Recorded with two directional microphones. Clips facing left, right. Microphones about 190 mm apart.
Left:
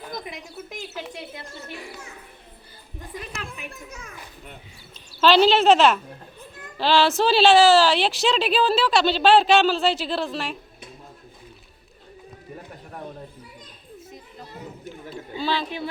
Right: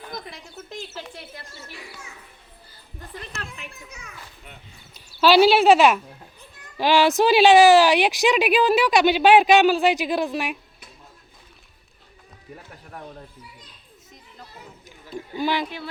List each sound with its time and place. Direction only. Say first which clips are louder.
0.3 s a sound: left 2 dB; 15° left (ahead or behind)
3.6 s children playing: left 3 dB; 55° left (ahead or behind)
4.9 s a woman's voice: right 2 dB; 10° right (ahead or behind)
15.4 s a woman's voice: right 2 dB; 15° right (ahead or behind)